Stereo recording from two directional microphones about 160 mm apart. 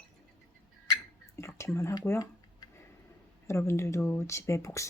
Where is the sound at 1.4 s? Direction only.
20° left (ahead or behind).